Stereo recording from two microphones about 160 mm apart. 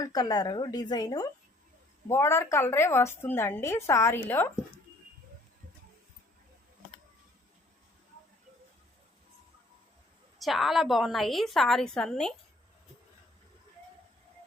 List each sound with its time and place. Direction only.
0.0 s a woman's voice: 25° left (ahead or behind)
10.3 s a woman's voice: centre (ahead or behind)